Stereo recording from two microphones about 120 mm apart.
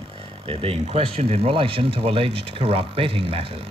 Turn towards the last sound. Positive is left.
turn(degrees=-50)  # may be behind; listen again after turning